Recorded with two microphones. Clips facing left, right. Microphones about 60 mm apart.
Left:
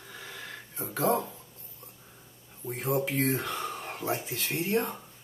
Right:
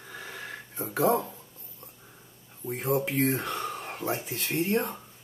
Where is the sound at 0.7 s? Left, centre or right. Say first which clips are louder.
Right 3 dB; centre.